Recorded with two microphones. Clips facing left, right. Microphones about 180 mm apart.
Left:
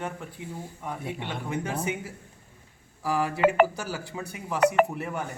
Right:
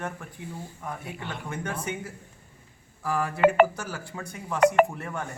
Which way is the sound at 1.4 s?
10° left (ahead or behind).